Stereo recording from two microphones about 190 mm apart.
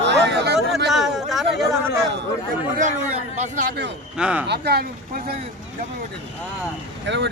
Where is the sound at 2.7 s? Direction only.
40° right (ahead or behind).